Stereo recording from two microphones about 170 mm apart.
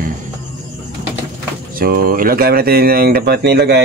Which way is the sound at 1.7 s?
60° right (ahead or behind).